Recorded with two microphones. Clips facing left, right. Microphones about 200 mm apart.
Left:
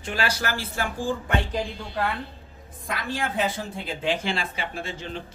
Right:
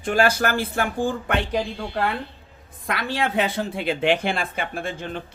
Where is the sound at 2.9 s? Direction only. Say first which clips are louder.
Right 4 dB; 70° right (ahead or behind).